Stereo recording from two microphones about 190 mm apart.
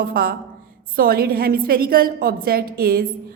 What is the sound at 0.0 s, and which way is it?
A woman's voice, 50° right (ahead or behind).